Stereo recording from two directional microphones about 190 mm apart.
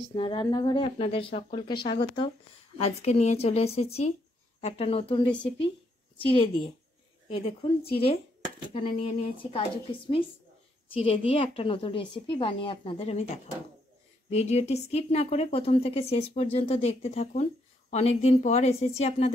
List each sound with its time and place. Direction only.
0.1 s a woman's voice: 25° left (ahead or behind)
14.3 s speech: 35° left (ahead or behind)